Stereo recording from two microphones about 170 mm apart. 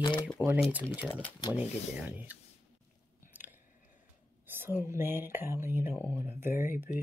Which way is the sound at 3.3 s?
10° right (ahead or behind).